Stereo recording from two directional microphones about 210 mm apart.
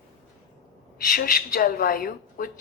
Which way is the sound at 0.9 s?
45° left (ahead or behind).